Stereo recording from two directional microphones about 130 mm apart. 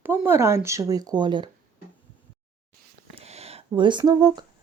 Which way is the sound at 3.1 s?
55° right (ahead or behind).